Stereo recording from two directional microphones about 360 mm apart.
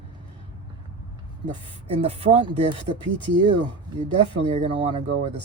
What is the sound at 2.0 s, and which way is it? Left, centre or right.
Speech, centre.